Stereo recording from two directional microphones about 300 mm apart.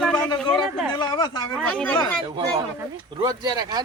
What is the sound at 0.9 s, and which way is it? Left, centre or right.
Speech, centre.